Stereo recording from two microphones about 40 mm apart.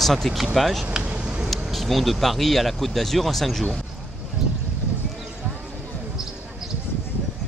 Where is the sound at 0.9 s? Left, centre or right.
Right.